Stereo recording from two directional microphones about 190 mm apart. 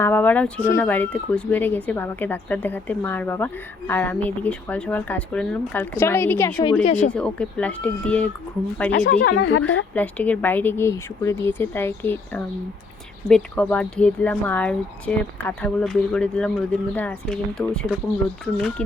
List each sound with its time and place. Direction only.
0.0 s speech: 10° left (ahead or behind)
6.8 s speech: 35° left (ahead or behind)
7.1 s speech: 5° left (ahead or behind)
8.9 s speech: 55° left (ahead or behind)
9.3 s speech: 75° left (ahead or behind)
9.9 s speech: 10° left (ahead or behind)